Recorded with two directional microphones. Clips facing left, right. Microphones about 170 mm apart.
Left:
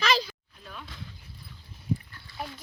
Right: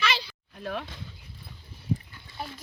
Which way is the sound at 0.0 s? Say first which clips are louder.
Left 4 dB; 40° left (ahead or behind).